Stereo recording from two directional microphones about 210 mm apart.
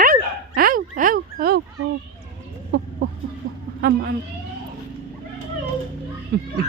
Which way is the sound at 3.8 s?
45° right (ahead or behind).